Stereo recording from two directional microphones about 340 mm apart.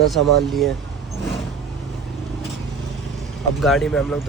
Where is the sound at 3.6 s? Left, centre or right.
Centre.